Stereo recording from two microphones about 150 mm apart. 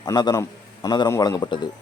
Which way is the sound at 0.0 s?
25° left (ahead or behind).